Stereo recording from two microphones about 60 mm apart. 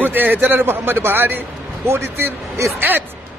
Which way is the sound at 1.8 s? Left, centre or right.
Right.